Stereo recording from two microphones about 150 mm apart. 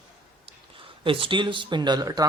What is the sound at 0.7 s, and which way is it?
Speech, 35° right (ahead or behind).